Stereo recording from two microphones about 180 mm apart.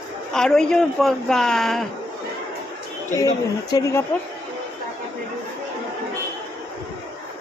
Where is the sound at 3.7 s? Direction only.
15° left (ahead or behind).